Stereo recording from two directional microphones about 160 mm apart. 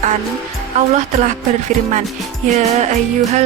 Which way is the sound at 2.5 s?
45° right (ahead or behind).